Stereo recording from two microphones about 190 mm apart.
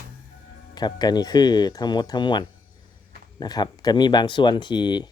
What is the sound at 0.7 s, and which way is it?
Speech, 20° left (ahead or behind).